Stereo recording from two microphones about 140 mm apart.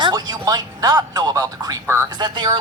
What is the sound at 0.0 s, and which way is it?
Speech, 30° right (ahead or behind).